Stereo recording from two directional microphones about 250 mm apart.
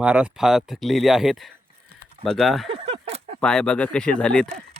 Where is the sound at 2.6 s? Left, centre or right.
Right.